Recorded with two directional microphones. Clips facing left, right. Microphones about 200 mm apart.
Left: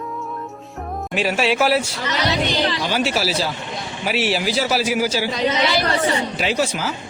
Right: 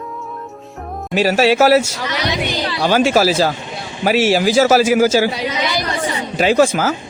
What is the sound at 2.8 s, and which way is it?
Speech, 45° right (ahead or behind).